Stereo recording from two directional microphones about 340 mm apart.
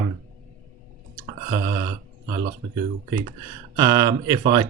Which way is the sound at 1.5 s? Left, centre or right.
Centre.